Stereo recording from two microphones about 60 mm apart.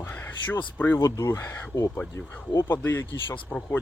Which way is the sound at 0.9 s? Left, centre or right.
Left.